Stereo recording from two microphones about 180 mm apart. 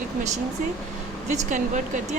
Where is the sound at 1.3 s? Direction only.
40° right (ahead or behind).